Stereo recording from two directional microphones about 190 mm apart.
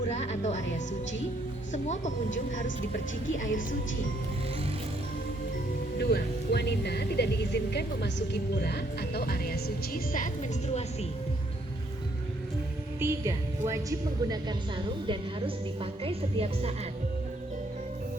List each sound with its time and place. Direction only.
0.0 s speech: 35° left (ahead or behind)
1.7 s speech: 40° left (ahead or behind)
6.0 s speech: 55° left (ahead or behind)
13.0 s speech: 15° right (ahead or behind)
15.0 s a woman's voice: 25° right (ahead or behind)